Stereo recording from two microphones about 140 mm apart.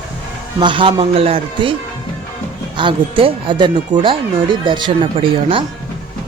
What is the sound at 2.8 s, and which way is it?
Speech, 35° right (ahead or behind).